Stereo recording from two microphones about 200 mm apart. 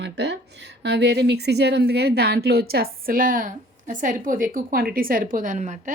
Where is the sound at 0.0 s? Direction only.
60° right (ahead or behind).